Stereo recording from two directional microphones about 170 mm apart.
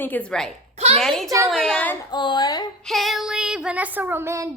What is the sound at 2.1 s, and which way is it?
Speech, 25° left (ahead or behind).